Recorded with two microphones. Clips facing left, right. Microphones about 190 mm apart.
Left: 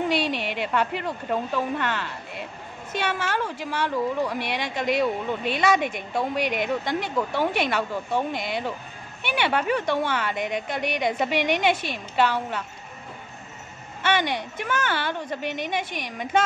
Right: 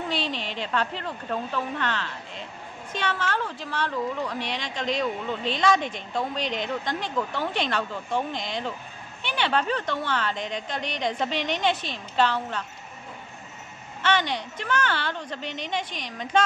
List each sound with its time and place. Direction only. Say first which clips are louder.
0.1 s a woman's voice: left 5 dB; 10° left (ahead or behind)
14.6 s a woman's voice: even; 10° left (ahead or behind)
15.4 s a woman's voice: left 5 dB; 55° left (ahead or behind)
15.7 s a woman's voice: left 2 dB; 10° left (ahead or behind)